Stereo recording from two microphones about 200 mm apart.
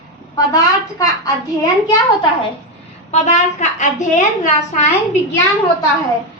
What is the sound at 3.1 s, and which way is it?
A woman's voice, 35° left (ahead or behind).